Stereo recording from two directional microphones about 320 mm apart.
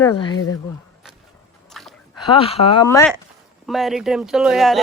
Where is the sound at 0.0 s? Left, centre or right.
Centre.